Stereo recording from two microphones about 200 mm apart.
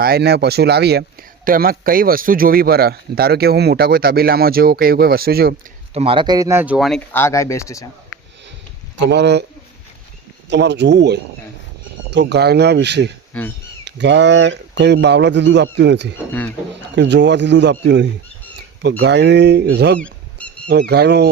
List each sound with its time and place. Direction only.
0.0 s speech: 55° right (ahead or behind)
5.9 s speech: 30° right (ahead or behind); by 7.0 s centre (ahead or behind)
7.1 s speech: 10° left (ahead or behind)
9.0 s speech: 60° right (ahead or behind)
10.5 s speech: 60° right (ahead or behind)
16.1 s speech: 10° left (ahead or behind)
16.9 s speech: 60° right (ahead or behind)